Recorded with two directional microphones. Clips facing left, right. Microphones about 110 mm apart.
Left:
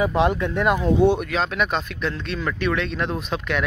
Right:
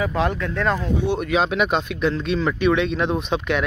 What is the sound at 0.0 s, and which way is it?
Speech, 20° left (ahead or behind).